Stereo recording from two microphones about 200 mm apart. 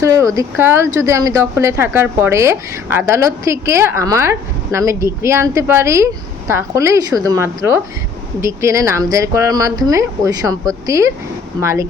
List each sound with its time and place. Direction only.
0.0 s speech: 15° right (ahead or behind)